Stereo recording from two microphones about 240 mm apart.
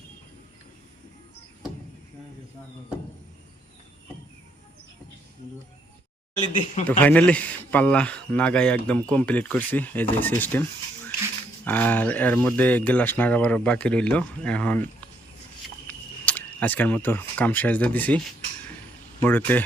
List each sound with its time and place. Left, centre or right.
6.5 s speech: left
7.0 s speech: centre
11.6 s speech: centre
15.9 s speech: centre
19.2 s speech: centre